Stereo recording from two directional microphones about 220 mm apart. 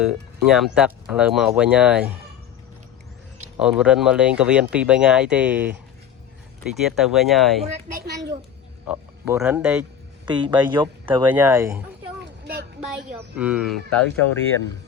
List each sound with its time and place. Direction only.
0.0 s speech: 5° right (ahead or behind)
3.6 s speech: 5° right (ahead or behind)
7.9 s a child's voice: 45° right (ahead or behind)
8.9 s speech: 5° right (ahead or behind)
10.2 s speech: 20° right (ahead or behind)
11.3 s speech: 10° right (ahead or behind)
12.2 s a sound: 50° right (ahead or behind)
13.1 s speech: 5° right (ahead or behind)